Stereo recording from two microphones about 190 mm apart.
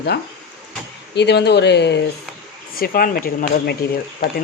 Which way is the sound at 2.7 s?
50° left (ahead or behind).